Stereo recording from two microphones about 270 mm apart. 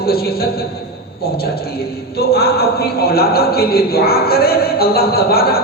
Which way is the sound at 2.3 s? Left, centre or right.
Left.